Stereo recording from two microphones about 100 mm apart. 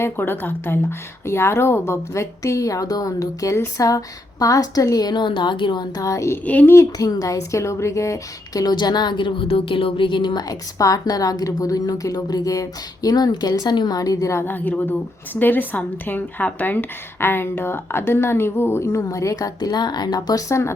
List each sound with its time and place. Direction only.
0.0 s a woman's voice: 20° left (ahead or behind); by 5.8 s 50° left (ahead or behind)
6.0 s a woman's voice: 30° left (ahead or behind)
6.4 s speech: 15° left (ahead or behind)
6.7 s a woman's voice: 35° left (ahead or behind); by 9.5 s 55° left (ahead or behind)
9.5 s a woman's voice: 65° left (ahead or behind)
10.5 s a woman's voice: 35° left (ahead or behind)